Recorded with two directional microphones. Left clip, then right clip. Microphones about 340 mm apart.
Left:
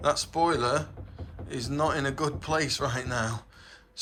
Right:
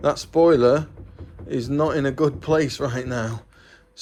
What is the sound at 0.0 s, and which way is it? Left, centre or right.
Speech, centre.